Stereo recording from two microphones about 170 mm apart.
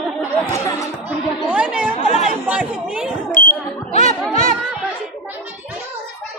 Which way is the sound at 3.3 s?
55° left (ahead or behind).